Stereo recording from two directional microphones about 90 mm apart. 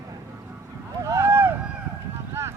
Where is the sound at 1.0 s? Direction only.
30° right (ahead or behind).